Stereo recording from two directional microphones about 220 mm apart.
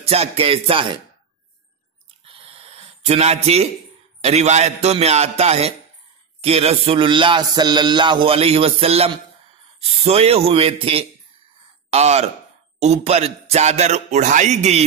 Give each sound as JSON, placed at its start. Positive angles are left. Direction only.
{"t": 0.0, "sound": "music", "side_deg": -25}
{"t": 2.2, "sound": "a sound", "side_deg": -25}
{"t": 4.2, "sound": "music", "side_deg": -30}
{"t": 12.7, "sound": "a man's voice", "side_deg": -30}